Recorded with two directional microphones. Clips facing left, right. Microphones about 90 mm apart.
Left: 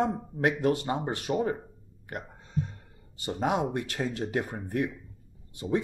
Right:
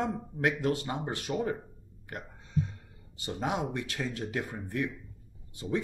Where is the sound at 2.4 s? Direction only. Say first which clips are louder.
Right 3 dB; 40° left (ahead or behind).